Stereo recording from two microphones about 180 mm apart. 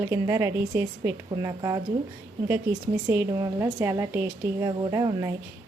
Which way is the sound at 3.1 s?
15° right (ahead or behind).